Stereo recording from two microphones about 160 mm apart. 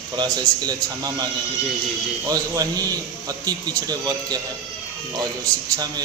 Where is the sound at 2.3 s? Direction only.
20° right (ahead or behind).